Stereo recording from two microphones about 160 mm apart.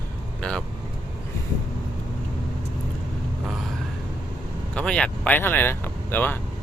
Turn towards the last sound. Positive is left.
turn(degrees=10)  # may be behind; listen again after turning